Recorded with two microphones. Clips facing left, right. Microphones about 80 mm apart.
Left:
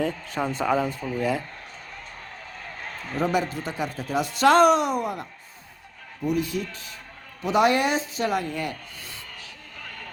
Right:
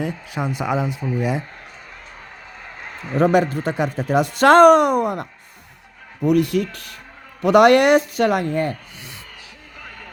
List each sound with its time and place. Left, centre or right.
0.0 s speech: centre
2.6 s a sound: centre
3.3 s speech: right
6.2 s speech: right
9.8 s vehicle: centre